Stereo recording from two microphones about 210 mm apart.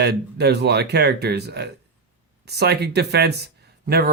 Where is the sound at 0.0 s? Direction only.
50° right (ahead or behind).